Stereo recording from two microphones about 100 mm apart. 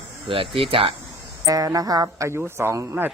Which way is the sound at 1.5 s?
35° right (ahead or behind).